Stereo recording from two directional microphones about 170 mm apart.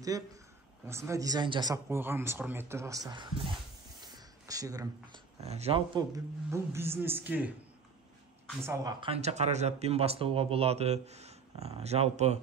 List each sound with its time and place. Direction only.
0.8 s speech: 15° right (ahead or behind)
4.0 s a sound: 20° right (ahead or behind)
5.4 s speech: 40° right (ahead or behind); by 7.5 s 10° right (ahead or behind)
9.0 s speech: 40° right (ahead or behind)